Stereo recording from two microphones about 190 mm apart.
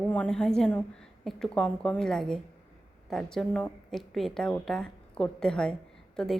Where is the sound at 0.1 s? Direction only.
5° left (ahead or behind).